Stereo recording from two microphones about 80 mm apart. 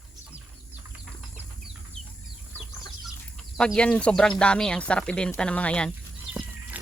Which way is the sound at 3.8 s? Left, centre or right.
Centre.